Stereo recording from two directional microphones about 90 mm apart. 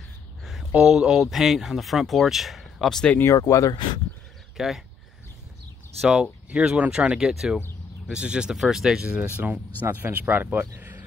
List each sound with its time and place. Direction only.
0.5 s speech: 5° right (ahead or behind)
3.3 s speech: 35° left (ahead or behind)
4.6 s speech: centre (ahead or behind)
5.9 s speech: 5° right (ahead or behind); by 10.7 s 20° right (ahead or behind)
10.8 s a sound: 20° right (ahead or behind)